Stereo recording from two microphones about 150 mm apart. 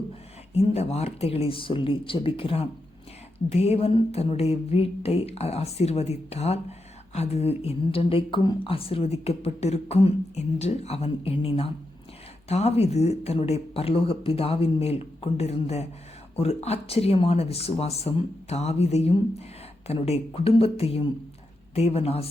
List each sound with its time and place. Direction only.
0.5 s speech: 45° left (ahead or behind)